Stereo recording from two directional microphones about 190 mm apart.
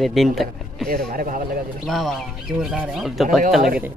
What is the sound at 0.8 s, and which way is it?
Speech, 50° right (ahead or behind).